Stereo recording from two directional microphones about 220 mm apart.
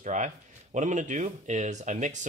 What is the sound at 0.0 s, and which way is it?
Speech, 35° right (ahead or behind).